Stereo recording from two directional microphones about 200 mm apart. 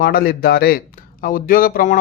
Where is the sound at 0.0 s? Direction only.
45° left (ahead or behind).